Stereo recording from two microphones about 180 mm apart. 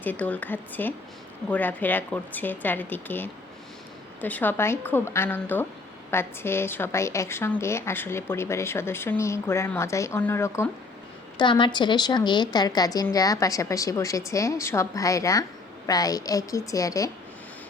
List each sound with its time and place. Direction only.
0.0 s a woman's voice: 10° left (ahead or behind)
11.3 s a woman's voice: 25° left (ahead or behind)